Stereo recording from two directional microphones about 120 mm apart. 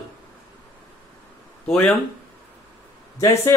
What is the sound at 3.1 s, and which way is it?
Speech, 25° left (ahead or behind).